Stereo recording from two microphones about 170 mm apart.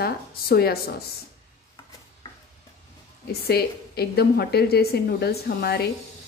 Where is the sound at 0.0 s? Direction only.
65° left (ahead or behind).